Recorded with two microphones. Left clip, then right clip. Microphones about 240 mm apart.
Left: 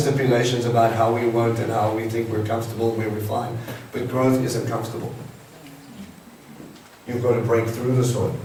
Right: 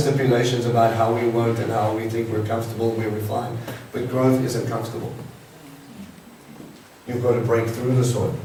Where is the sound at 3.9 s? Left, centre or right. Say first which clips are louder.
Even; centre.